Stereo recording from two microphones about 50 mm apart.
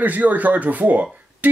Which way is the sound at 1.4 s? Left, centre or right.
Right.